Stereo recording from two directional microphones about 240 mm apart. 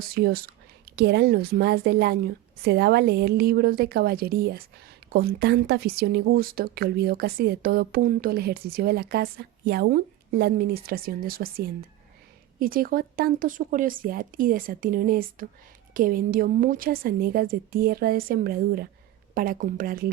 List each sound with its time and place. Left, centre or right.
0.0 s speech: right